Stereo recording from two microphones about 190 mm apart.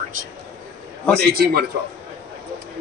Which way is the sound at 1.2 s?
55° right (ahead or behind).